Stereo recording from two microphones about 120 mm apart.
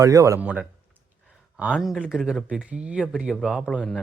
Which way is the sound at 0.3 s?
10° right (ahead or behind).